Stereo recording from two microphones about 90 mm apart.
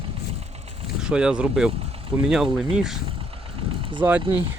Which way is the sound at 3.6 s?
80° right.